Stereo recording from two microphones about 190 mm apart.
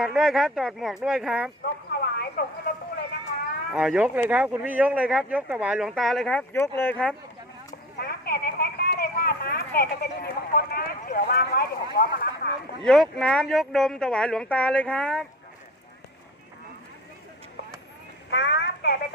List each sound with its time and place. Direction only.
0.0 s speech: centre (ahead or behind)
2.0 s a sound: 55° left (ahead or behind)
3.7 s speech: 5° right (ahead or behind)
7.9 s speech: 55° left (ahead or behind)
12.8 s speech: 5° left (ahead or behind)
18.3 s a sound: 65° left (ahead or behind)